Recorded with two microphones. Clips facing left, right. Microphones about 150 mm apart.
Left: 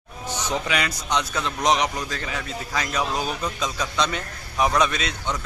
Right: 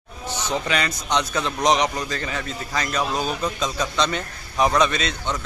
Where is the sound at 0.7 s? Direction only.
5° left (ahead or behind).